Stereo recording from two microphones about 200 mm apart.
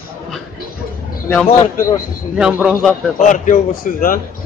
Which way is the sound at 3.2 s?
40° left (ahead or behind).